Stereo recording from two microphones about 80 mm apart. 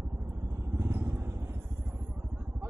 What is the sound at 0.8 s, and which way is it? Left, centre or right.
Vehicle, right.